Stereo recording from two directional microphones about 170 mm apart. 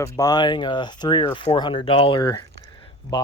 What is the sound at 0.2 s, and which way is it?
Speech, 25° left (ahead or behind).